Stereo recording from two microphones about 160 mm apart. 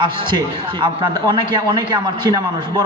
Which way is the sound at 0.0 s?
30° right (ahead or behind).